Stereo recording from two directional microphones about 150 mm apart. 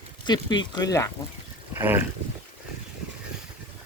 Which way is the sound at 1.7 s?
15° right (ahead or behind).